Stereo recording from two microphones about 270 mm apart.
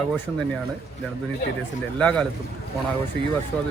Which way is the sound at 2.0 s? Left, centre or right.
Centre.